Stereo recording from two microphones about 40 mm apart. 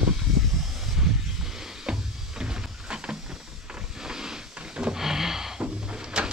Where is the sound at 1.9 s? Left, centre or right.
Right.